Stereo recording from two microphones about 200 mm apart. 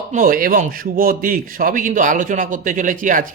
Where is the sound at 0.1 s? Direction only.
40° right (ahead or behind).